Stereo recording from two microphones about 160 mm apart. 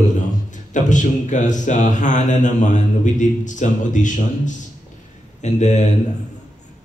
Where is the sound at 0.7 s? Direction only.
50° left (ahead or behind).